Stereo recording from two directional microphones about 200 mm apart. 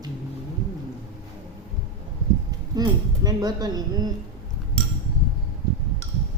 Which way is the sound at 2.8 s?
20° right (ahead or behind).